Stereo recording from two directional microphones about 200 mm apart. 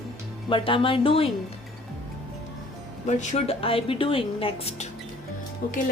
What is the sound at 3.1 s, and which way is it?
A woman's voice, 35° left (ahead or behind).